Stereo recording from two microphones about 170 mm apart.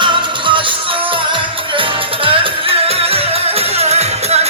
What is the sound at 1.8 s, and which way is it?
Music, 30° right (ahead or behind).